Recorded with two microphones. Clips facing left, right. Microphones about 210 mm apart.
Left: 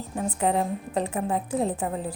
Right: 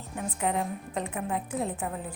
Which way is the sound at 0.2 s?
35° left (ahead or behind).